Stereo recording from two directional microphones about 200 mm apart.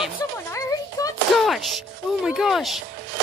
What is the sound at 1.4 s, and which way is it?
A woman's voice, centre (ahead or behind).